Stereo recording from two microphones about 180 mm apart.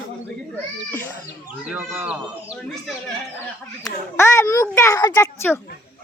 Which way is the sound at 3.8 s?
15° left (ahead or behind).